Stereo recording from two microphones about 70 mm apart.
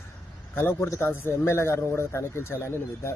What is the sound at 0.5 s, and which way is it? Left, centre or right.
Speech, left.